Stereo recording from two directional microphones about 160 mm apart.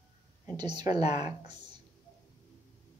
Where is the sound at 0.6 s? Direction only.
30° right (ahead or behind).